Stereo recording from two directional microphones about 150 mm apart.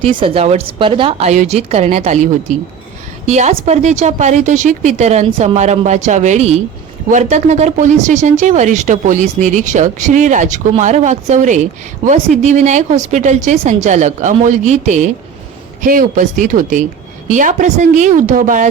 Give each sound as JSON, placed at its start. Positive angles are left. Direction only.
{"t": 0.2, "sound": "a woman's voice", "side_deg": -40}
{"t": 1.3, "sound": "speech", "side_deg": -50}
{"t": 15.8, "sound": "a woman's voice", "side_deg": -60}